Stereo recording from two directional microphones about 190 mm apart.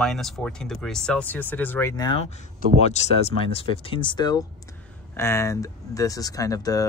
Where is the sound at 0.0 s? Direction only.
5° left (ahead or behind); by 2.2 s 20° left (ahead or behind).